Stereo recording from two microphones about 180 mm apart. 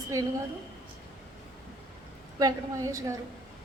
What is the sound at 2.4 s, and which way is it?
Speech, 20° right (ahead or behind).